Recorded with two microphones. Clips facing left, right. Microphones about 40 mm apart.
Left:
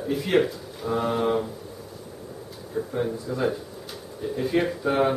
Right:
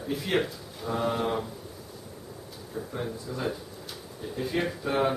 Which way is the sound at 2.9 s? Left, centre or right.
Centre.